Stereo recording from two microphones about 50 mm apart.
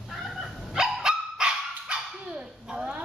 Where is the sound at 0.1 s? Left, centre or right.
Centre.